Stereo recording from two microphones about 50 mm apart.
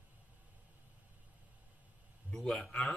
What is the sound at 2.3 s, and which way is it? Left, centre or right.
Speech, centre.